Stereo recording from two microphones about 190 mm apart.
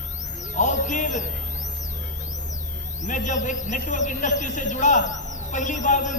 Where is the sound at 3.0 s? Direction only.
40° left (ahead or behind).